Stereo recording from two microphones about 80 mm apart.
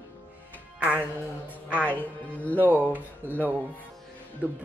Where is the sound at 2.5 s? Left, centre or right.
Right.